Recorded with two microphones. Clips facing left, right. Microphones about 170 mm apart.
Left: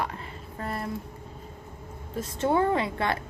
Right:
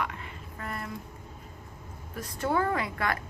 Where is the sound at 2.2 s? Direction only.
25° left (ahead or behind).